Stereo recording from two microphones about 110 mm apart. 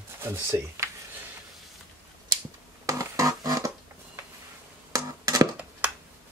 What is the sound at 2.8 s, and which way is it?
Music, 30° right (ahead or behind).